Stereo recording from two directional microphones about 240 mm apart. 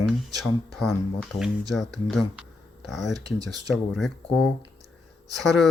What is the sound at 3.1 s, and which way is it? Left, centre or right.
Speech, centre.